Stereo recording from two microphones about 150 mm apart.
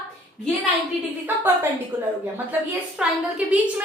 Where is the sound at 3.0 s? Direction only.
5° right (ahead or behind).